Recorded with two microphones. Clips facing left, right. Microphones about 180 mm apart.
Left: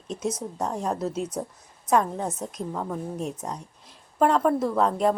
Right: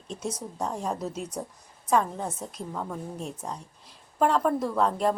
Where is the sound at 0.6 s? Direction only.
Centre (ahead or behind).